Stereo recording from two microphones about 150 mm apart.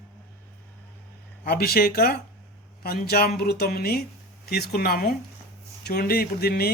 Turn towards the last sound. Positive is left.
turn(degrees=90)